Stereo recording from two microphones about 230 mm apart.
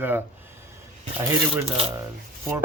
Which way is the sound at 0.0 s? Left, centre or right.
Centre.